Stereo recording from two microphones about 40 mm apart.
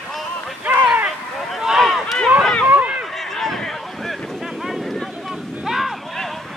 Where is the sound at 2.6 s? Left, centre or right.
Right.